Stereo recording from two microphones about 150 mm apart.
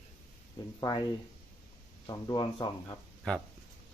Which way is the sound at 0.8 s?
25° left (ahead or behind).